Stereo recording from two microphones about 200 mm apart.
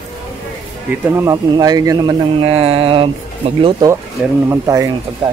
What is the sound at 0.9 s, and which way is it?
Speech, 15° right (ahead or behind).